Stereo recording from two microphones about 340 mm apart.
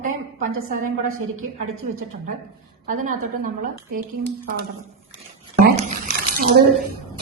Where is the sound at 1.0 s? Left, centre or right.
Right.